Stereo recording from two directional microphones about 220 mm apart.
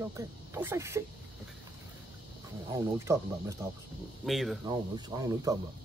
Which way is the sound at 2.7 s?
15° right (ahead or behind).